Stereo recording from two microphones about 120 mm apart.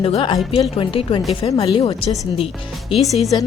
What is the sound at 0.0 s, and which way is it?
A woman's voice, 45° left (ahead or behind).